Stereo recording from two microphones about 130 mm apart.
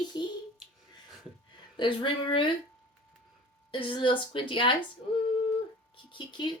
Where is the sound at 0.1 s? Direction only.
35° left (ahead or behind).